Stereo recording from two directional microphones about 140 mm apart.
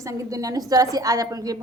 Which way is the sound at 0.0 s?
25° right (ahead or behind).